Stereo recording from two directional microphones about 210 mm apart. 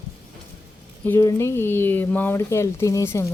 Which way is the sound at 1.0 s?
10° left (ahead or behind).